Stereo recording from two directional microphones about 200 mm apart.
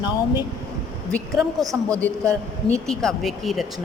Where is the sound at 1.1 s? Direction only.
5° left (ahead or behind).